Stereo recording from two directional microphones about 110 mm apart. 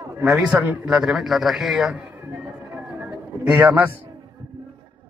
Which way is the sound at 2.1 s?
10° right (ahead or behind).